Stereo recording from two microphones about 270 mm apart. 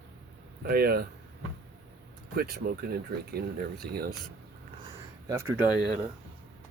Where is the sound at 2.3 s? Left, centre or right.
Right.